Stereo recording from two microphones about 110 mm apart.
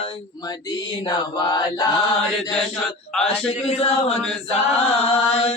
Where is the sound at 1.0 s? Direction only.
40° left (ahead or behind).